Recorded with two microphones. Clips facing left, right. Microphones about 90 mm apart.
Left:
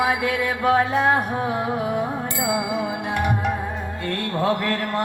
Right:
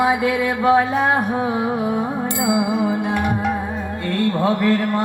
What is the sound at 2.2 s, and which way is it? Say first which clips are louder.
Music: right 5 dB; 20° right (ahead or behind).